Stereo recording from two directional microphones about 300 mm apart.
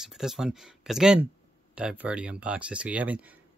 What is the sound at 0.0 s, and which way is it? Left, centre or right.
Speech, centre.